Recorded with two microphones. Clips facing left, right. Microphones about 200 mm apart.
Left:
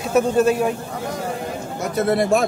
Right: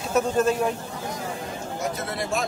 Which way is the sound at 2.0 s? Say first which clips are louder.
Left 11 dB; 60° left (ahead or behind).